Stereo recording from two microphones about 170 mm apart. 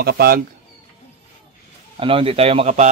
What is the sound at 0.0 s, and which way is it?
Speech, 65° right (ahead or behind).